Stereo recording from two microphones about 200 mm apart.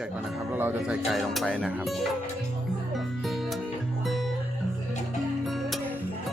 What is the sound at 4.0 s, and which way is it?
Guitar, centre (ahead or behind).